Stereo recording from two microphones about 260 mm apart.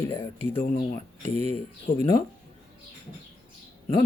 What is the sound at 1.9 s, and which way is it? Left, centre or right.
Speech, left.